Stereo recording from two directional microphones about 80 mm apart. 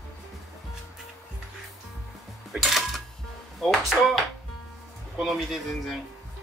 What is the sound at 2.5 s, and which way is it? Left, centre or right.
Music, centre.